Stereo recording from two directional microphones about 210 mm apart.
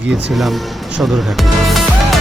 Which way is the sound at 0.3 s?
Centre (ahead or behind).